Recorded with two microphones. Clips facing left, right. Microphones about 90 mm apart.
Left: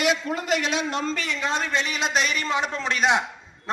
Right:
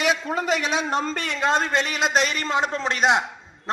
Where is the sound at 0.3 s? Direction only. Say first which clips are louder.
Right 2 dB; 5° right (ahead or behind).